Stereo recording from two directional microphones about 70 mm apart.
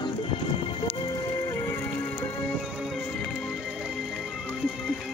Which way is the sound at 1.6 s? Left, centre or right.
Left.